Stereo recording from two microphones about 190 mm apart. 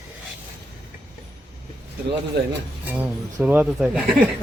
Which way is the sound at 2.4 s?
60° right (ahead or behind).